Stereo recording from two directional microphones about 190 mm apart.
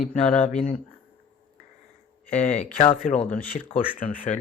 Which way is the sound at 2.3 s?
35° left (ahead or behind).